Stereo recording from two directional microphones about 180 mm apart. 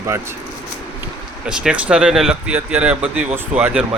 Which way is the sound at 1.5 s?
5° right (ahead or behind).